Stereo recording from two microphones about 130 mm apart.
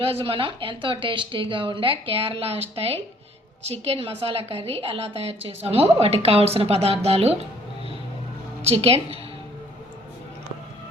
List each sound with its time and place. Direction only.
0.0 s a woman's voice: 45° right (ahead or behind)
8.6 s a woman's voice: 50° right (ahead or behind)